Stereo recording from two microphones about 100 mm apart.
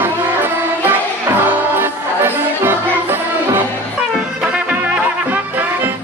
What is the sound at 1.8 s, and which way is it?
Music, 20° right (ahead or behind).